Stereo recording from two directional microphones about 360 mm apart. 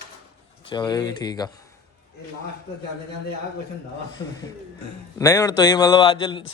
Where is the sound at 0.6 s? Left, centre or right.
Centre.